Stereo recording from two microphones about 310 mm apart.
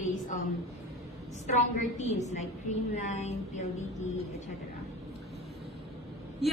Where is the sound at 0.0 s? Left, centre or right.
Left.